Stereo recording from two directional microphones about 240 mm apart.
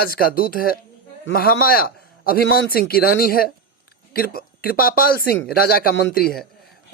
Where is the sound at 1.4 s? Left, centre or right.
Left.